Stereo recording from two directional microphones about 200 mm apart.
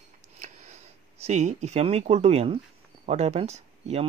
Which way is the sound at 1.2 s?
35° right (ahead or behind).